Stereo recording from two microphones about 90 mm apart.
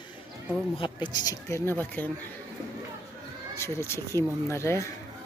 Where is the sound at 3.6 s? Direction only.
30° left (ahead or behind).